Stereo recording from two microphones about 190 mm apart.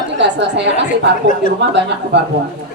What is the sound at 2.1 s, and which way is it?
Speech, 65° right (ahead or behind).